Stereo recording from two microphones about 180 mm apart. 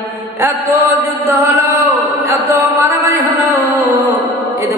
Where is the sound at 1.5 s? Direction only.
15° right (ahead or behind).